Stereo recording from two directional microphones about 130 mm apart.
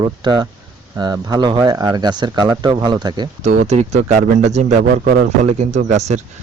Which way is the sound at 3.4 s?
60° right (ahead or behind).